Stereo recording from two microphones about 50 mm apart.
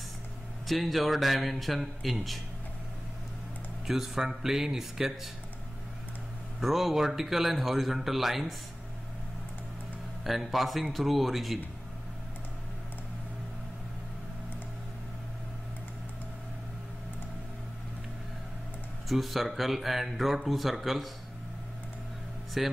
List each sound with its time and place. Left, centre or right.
0.7 s speech: centre
3.8 s speech: centre
6.6 s speech: centre
10.2 s speech: centre
19.0 s speech: centre
22.6 s speech: centre